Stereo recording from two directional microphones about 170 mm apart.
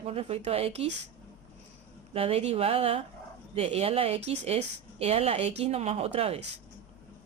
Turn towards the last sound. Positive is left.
turn(degrees=-40)  # may be behind; listen again after turning